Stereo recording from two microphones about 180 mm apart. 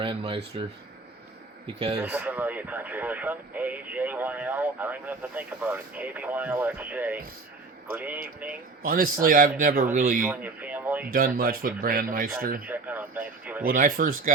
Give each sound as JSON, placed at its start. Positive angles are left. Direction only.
{"t": 0.0, "sound": "a man's voice", "side_deg": -30}
{"t": 2.0, "sound": "speech", "side_deg": -5}
{"t": 8.8, "sound": "a man's voice", "side_deg": -50}
{"t": 10.2, "sound": "speech", "side_deg": -10}
{"t": 11.1, "sound": "a man's voice", "side_deg": -55}
{"t": 12.6, "sound": "speech", "side_deg": -10}
{"t": 13.7, "sound": "a man's voice", "side_deg": -50}